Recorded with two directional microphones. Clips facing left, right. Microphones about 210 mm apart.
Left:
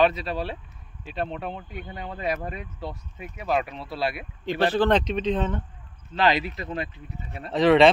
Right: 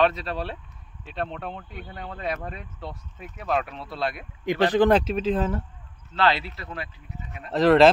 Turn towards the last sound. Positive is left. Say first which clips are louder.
# right 1 dB
turn(degrees=0)  # may be behind; listen again after turning